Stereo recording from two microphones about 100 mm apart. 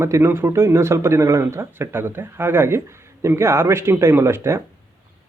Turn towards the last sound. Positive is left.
turn(degrees=-25)  # may be behind; listen again after turning